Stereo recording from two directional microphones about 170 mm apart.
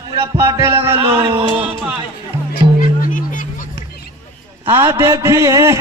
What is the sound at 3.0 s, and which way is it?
Music, 50° left (ahead or behind).